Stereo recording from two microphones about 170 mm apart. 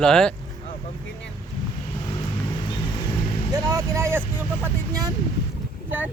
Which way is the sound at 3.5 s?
20° right (ahead or behind).